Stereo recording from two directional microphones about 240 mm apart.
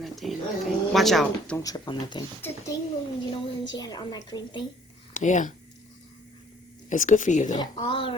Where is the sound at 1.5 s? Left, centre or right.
Centre.